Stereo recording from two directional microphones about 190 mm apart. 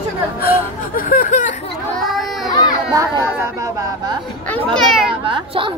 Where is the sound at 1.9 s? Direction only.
Centre (ahead or behind).